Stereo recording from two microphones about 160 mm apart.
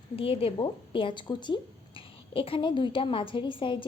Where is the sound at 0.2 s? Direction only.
35° left (ahead or behind).